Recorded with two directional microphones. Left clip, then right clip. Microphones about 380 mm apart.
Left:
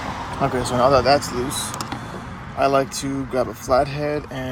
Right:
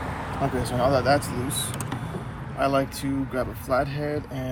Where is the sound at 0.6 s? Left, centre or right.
Centre.